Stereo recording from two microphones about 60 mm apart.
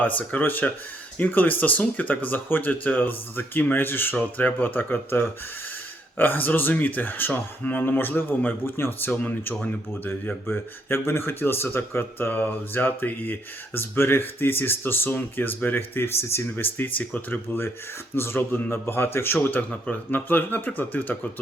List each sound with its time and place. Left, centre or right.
0.0 s speech: left